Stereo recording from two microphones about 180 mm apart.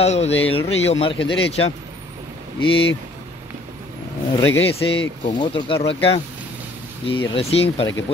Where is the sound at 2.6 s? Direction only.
30° left (ahead or behind).